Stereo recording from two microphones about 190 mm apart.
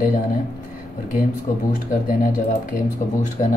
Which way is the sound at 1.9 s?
45° left (ahead or behind).